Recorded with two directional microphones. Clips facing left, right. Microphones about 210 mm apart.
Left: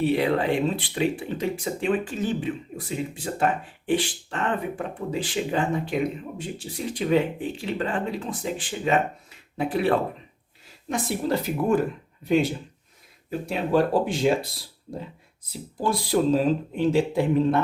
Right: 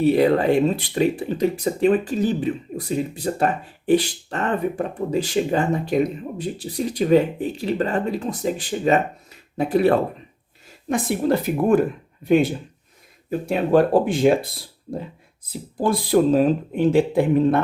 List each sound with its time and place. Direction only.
0.0 s speech: 40° right (ahead or behind)
13.5 s speech: 55° right (ahead or behind)